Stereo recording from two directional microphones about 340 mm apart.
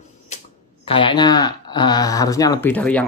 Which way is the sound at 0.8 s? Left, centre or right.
Centre.